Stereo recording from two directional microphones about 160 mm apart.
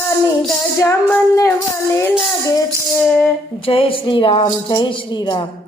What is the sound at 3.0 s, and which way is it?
Music, 5° left (ahead or behind).